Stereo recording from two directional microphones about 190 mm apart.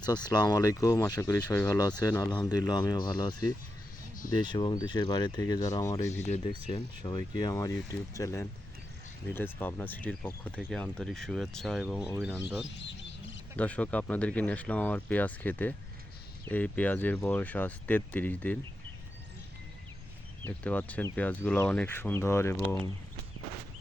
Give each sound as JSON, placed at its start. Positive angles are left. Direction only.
{"t": 0.0, "sound": "speech", "side_deg": 20}
{"t": 6.2, "sound": "speech", "side_deg": 35}
{"t": 7.0, "sound": "speech", "side_deg": 20}
{"t": 13.1, "sound": "bird", "side_deg": 75}
{"t": 13.6, "sound": "speech", "side_deg": 5}
{"t": 20.4, "sound": "speech", "side_deg": 10}